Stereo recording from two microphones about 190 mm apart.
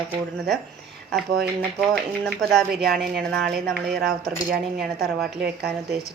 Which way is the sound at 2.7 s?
55° right (ahead or behind).